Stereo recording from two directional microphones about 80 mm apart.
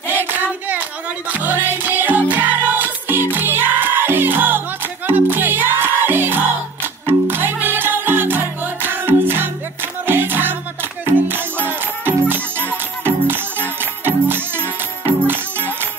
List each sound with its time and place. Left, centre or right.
0.1 s hands: right
1.3 s music: right